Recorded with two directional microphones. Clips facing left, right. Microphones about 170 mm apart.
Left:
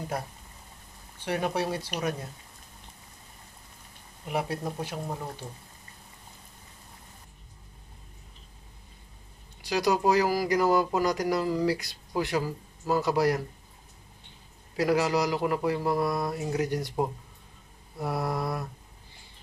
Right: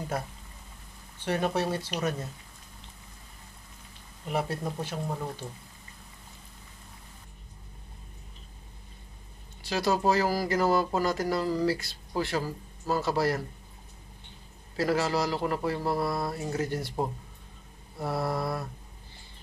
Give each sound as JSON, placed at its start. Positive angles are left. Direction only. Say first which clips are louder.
{"t": 1.2, "sound": "speech", "louder": "right 1 dB", "side_deg": 10}
{"t": 4.3, "sound": "speech", "louder": "even", "side_deg": 10}
{"t": 9.6, "sound": "speech", "louder": "left 2 dB", "side_deg": 15}
{"t": 14.8, "sound": "speech", "louder": "left 2 dB", "side_deg": 15}